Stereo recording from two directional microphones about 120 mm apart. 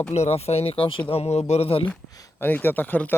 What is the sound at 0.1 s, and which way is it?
Speech, 60° left (ahead or behind).